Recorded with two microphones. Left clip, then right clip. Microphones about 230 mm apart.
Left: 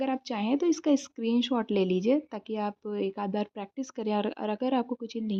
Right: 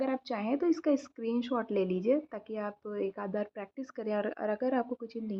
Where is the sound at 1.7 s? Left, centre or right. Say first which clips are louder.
Left 3 dB; left.